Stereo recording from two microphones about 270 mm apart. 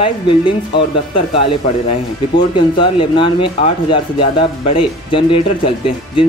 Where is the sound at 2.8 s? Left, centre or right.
Centre.